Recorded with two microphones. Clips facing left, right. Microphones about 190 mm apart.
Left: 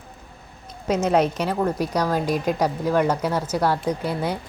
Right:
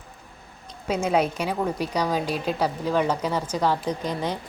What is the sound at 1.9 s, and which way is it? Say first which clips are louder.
Speech: left 2 dB; 10° right (ahead or behind).